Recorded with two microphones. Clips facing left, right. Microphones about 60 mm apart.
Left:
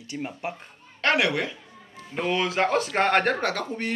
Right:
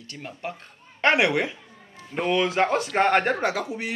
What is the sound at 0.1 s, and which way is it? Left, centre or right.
Speech, centre.